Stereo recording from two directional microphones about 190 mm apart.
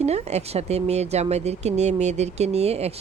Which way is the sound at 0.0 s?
35° right (ahead or behind).